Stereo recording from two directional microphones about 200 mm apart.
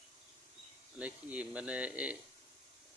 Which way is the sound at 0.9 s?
5° right (ahead or behind).